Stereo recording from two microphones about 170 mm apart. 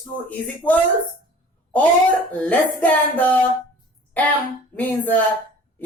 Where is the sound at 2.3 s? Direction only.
10° left (ahead or behind).